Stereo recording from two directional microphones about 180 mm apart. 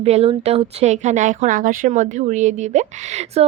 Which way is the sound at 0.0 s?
35° right (ahead or behind).